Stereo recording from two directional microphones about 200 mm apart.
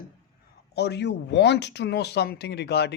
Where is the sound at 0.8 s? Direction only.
55° left (ahead or behind).